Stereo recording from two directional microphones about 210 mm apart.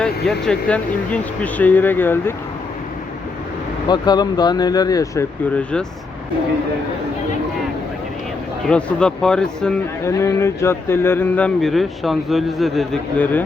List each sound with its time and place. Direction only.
0.0 s speech: 5° left (ahead or behind)
3.8 s speech: 20° left (ahead or behind)
8.7 s speech: 5° left (ahead or behind)
10.1 s speech: 15° left (ahead or behind)